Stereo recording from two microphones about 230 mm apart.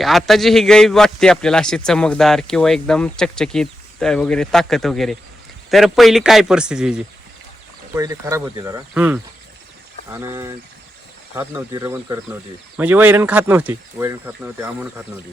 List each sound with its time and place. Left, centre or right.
0.0 s a man's voice: centre
7.9 s speech: centre